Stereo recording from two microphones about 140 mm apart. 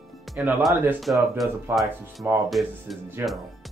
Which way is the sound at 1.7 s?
15° right (ahead or behind).